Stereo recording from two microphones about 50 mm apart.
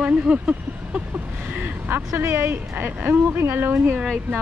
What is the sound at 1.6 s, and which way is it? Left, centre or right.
Speech, right.